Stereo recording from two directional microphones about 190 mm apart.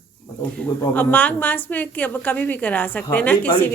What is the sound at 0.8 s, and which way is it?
A woman's voice, 10° left (ahead or behind).